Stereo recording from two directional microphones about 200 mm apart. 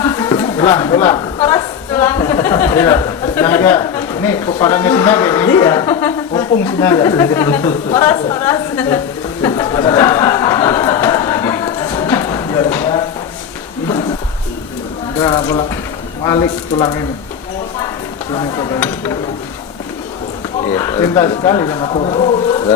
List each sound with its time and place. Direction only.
0.0 s a sound: 15° left (ahead or behind)
4.6 s speech: 15° left (ahead or behind)
9.4 s a sound: 20° left (ahead or behind)
15.2 s speech: 25° left (ahead or behind)
18.3 s speech: 20° left (ahead or behind)
18.8 s speech: 10° left (ahead or behind)
20.7 s speech: 15° left (ahead or behind)